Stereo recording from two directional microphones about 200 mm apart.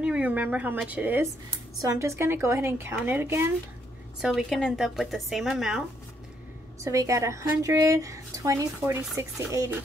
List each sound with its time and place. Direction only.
0.0 s speech: 5° right (ahead or behind)
4.2 s speech: centre (ahead or behind)
6.8 s speech: 15° right (ahead or behind)